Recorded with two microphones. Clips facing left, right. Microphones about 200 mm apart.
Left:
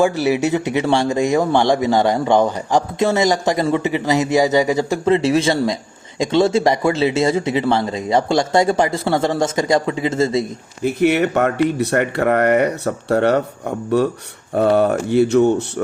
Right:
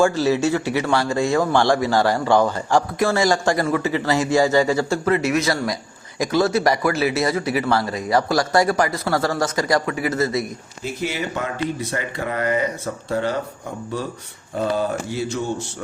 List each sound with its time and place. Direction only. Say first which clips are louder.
0.0 s speech: left 1 dB; 15° left (ahead or behind)
10.8 s speech: left 10 dB; 65° left (ahead or behind)